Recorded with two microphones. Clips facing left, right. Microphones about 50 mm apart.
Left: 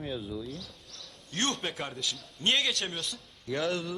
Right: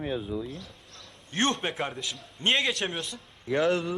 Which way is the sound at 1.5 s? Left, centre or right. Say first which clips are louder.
Right 4 dB; centre.